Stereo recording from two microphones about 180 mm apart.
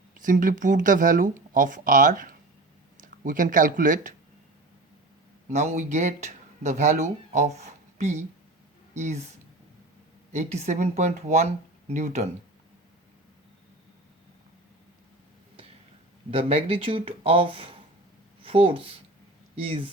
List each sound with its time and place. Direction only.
0.2 s speech: 45° right (ahead or behind)
5.5 s speech: 40° right (ahead or behind)
10.3 s speech: 40° right (ahead or behind)
16.3 s speech: 30° right (ahead or behind)